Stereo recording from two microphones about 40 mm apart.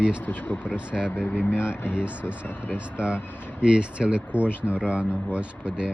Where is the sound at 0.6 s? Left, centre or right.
Right.